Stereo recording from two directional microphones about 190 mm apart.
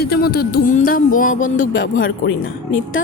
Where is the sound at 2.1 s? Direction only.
85° left.